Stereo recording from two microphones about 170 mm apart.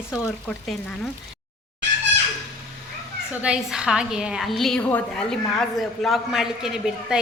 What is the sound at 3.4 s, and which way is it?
A woman's voice, 5° right (ahead or behind).